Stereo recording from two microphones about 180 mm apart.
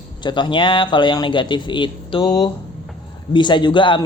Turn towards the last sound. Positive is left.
turn(degrees=25)  # may be behind; listen again after turning